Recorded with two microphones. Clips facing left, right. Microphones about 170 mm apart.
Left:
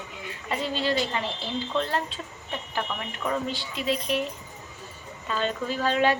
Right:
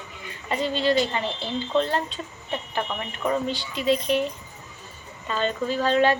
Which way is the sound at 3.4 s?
Centre (ahead or behind).